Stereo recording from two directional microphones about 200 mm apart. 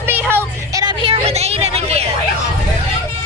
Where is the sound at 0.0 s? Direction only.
10° right (ahead or behind); by 2.0 s 30° right (ahead or behind).